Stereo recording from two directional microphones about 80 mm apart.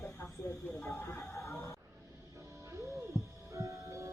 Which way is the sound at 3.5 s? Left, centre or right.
Right.